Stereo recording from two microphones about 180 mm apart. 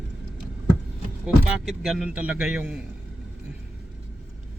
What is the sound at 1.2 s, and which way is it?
Speech, centre (ahead or behind).